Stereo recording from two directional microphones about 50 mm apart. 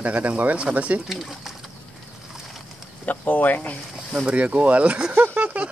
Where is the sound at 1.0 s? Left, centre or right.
Centre.